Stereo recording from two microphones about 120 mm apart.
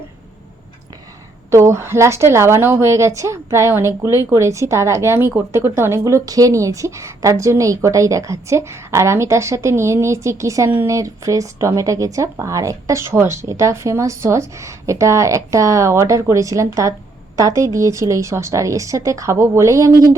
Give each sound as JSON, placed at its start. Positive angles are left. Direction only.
{"t": 1.5, "sound": "a woman's voice", "side_deg": -25}